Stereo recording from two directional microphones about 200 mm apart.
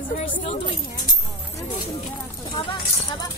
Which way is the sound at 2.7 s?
20° left (ahead or behind).